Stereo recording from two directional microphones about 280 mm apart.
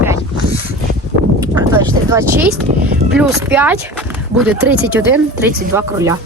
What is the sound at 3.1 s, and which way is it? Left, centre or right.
Speech, centre.